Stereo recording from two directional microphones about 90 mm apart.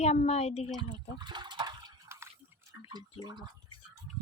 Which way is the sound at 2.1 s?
30° right (ahead or behind).